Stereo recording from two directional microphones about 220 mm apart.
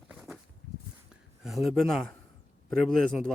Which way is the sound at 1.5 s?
Centre (ahead or behind).